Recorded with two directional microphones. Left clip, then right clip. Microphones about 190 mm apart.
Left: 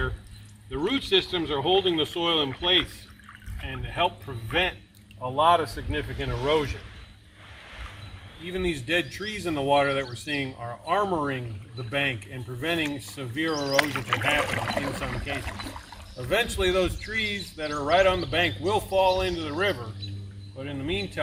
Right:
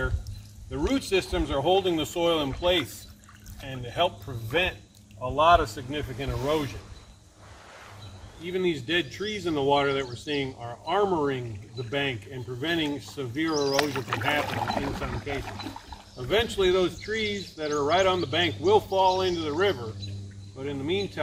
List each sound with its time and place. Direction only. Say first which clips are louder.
0.9 s speech: left 2 dB; 60° right (ahead or behind)
5.2 s speech: right 1 dB; 15° right (ahead or behind)
6.2 s speech: left 3 dB; 15° left (ahead or behind)
8.4 s a man's voice: right 1 dB; 55° left (ahead or behind)
13.7 s speech: left 2 dB; 20° left (ahead or behind)
16.3 s speech: right 1 dB; 60° left (ahead or behind)